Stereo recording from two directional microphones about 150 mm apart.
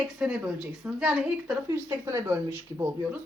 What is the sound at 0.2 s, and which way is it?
A woman's voice, 5° right (ahead or behind).